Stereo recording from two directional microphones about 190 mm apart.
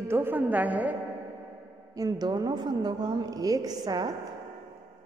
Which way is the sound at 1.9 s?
20° right (ahead or behind).